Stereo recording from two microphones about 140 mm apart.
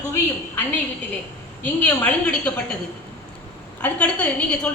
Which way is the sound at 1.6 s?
10° left (ahead or behind).